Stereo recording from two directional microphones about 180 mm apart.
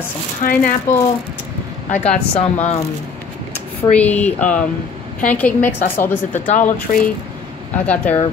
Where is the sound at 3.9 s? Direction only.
10° left (ahead or behind).